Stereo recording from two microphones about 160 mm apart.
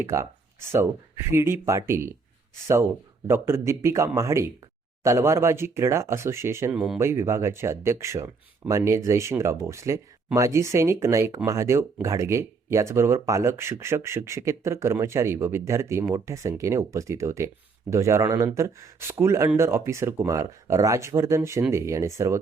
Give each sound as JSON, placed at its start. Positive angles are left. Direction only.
{"t": 0.0, "sound": "speech", "side_deg": -15}
{"t": 3.2, "sound": "speech", "side_deg": -15}